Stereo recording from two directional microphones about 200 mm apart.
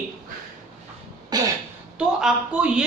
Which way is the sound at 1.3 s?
20° right (ahead or behind).